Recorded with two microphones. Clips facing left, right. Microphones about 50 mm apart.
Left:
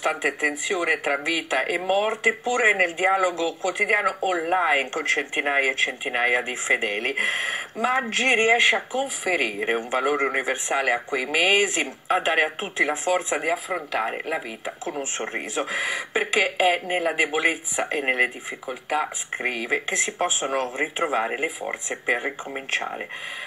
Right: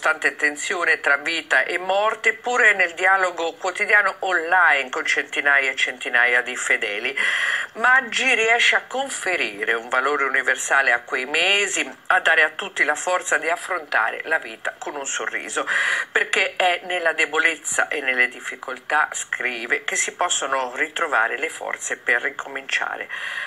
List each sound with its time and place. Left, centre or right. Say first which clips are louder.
0.0 s speech: right 4 dB; right